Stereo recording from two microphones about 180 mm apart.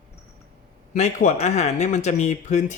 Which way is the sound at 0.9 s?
40° left (ahead or behind).